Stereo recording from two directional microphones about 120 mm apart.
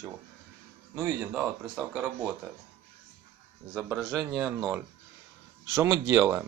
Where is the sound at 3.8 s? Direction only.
Centre (ahead or behind).